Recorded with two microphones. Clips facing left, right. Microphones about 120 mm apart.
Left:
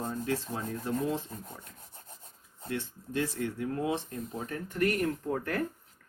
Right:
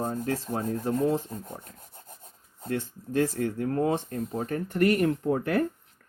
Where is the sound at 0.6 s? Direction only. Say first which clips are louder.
Right 6 dB; 35° right (ahead or behind); by 5.6 s 75° right (ahead or behind).